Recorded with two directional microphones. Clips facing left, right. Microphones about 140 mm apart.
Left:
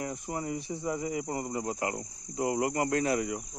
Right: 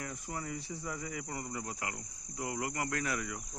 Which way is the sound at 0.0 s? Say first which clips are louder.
Left 7 dB; 25° left (ahead or behind).